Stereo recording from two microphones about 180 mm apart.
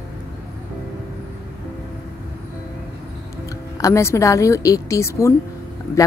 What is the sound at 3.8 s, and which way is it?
A woman's voice, 15° left (ahead or behind).